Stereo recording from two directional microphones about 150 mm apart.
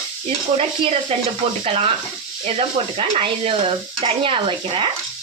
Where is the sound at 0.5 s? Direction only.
40° right (ahead or behind).